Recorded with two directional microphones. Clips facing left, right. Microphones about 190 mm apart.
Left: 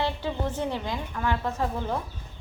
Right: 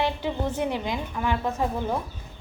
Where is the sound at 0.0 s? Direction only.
15° right (ahead or behind).